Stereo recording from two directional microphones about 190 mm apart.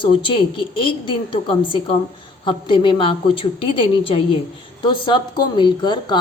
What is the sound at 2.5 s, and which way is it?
A woman's voice, 25° left (ahead or behind).